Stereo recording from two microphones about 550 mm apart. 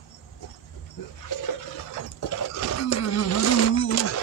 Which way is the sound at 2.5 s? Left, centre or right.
Left.